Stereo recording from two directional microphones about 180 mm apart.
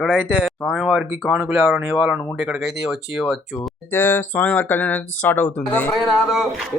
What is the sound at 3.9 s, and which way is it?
Speech, 10° left (ahead or behind).